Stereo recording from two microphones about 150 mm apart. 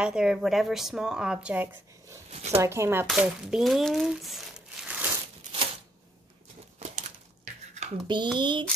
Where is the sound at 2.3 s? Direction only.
45° right (ahead or behind).